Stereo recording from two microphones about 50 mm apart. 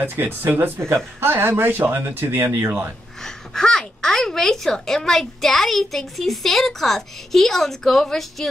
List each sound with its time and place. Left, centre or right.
0.0 s speech: right
0.7 s speech: right
3.3 s speech: centre